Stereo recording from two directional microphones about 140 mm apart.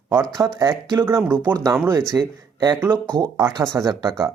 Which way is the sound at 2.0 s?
30° right (ahead or behind).